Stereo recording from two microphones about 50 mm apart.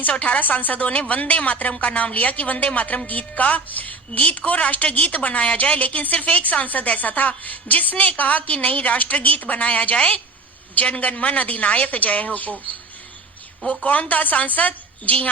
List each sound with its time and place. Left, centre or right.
0.0 s a woman's voice: left
13.7 s a woman's voice: left